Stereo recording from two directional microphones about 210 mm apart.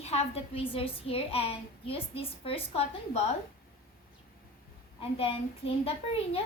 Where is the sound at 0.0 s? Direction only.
30° left (ahead or behind).